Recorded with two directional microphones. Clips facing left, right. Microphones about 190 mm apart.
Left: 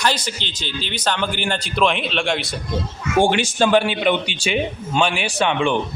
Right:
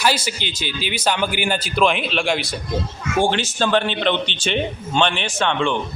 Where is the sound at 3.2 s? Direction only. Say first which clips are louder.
Left 3 dB; 10° left (ahead or behind).